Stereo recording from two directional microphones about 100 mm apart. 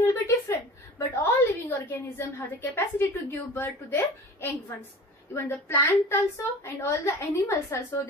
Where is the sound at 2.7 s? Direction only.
20° left (ahead or behind).